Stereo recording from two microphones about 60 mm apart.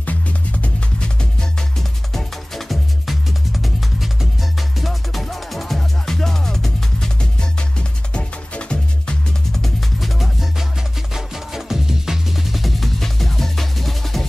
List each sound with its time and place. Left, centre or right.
0.0 s music: left
1.8 s music: centre
9.5 s music: centre